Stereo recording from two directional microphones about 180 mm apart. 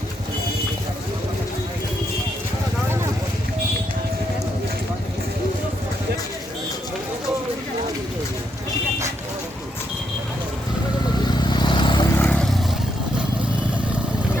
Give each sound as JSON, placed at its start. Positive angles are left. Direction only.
{"t": 11.3, "sound": "vehicle", "side_deg": 25}
{"t": 12.1, "sound": "vehicle", "side_deg": 10}